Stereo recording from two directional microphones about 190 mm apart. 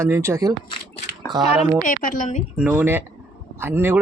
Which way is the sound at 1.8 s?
45° left (ahead or behind).